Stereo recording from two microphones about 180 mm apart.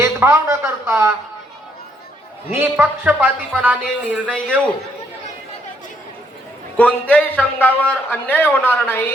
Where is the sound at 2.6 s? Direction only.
10° right (ahead or behind).